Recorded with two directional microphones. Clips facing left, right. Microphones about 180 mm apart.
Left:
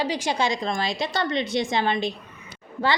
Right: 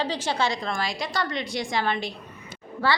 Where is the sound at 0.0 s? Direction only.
15° left (ahead or behind).